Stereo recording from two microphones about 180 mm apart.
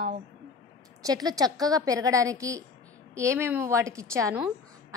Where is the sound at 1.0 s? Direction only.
20° right (ahead or behind).